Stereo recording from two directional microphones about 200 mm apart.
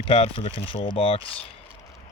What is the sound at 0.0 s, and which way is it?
Speech, 30° left (ahead or behind).